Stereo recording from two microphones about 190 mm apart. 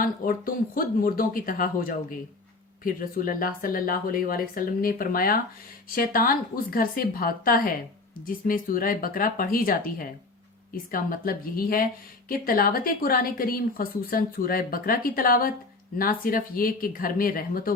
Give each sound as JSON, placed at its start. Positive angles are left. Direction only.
{"t": 0.0, "sound": "a woman's voice", "side_deg": 50}